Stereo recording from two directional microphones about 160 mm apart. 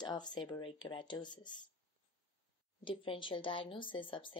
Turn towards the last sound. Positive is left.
turn(degrees=30)  # may be behind; listen again after turning